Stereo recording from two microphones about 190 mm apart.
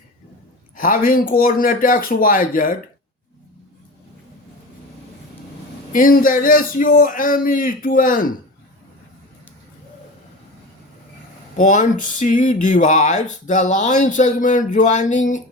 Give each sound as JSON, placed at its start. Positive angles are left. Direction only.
{"t": 0.8, "sound": "a man's voice", "side_deg": 45}
{"t": 5.9, "sound": "a man's voice", "side_deg": 45}
{"t": 11.5, "sound": "a sound", "side_deg": 40}